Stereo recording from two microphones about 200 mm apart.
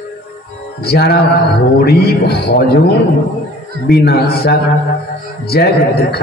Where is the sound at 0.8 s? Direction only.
50° left (ahead or behind).